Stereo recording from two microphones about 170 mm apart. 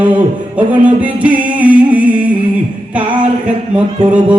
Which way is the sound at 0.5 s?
10° right (ahead or behind).